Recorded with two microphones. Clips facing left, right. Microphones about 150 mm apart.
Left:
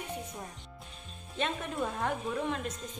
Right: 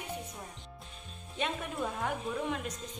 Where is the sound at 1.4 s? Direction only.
15° right (ahead or behind).